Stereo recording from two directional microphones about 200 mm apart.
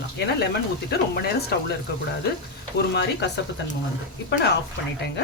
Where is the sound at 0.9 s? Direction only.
50° left (ahead or behind).